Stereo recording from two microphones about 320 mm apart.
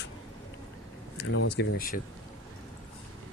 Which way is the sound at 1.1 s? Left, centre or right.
Left.